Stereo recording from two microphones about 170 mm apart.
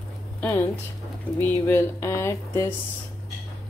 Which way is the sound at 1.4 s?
15° left (ahead or behind).